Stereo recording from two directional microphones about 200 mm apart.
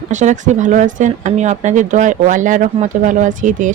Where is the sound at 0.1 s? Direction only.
35° right (ahead or behind).